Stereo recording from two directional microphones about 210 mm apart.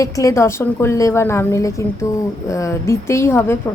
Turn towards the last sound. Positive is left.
turn(degrees=10)  # may be behind; listen again after turning